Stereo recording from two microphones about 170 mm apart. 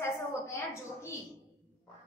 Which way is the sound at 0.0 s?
15° left (ahead or behind).